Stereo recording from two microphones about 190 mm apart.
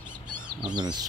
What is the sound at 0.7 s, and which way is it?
Speech, 20° right (ahead or behind).